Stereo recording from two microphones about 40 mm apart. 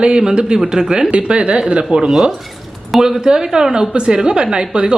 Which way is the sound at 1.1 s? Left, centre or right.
Right.